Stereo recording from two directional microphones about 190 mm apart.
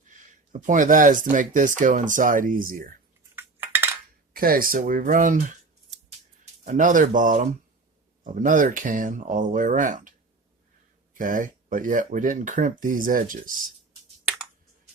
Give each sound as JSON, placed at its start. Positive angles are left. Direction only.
{"t": 0.5, "sound": "speech", "side_deg": -40}
{"t": 3.3, "sound": "cutlery", "side_deg": -10}
{"t": 4.4, "sound": "speech", "side_deg": -50}
{"t": 6.7, "sound": "speech", "side_deg": -40}
{"t": 11.2, "sound": "speech", "side_deg": -45}